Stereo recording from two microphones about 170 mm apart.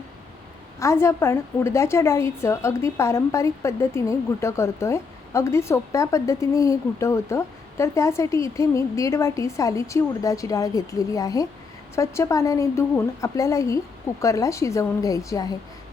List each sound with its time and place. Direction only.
0.8 s a woman's voice: 15° left (ahead or behind)